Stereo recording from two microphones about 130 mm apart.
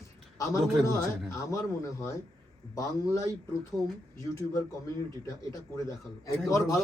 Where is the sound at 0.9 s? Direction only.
25° left (ahead or behind).